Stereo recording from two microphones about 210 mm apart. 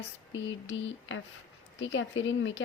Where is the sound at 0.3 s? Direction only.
65° left (ahead or behind).